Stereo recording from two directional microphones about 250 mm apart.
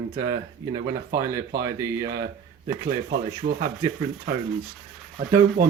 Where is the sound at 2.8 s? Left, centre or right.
Right.